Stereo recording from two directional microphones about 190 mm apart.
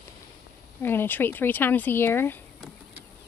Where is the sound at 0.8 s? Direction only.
10° left (ahead or behind).